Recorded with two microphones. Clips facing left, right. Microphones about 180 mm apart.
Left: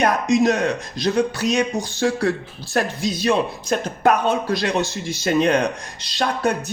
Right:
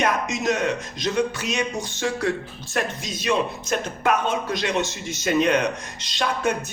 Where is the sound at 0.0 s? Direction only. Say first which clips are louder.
Left 6 dB; 35° left (ahead or behind).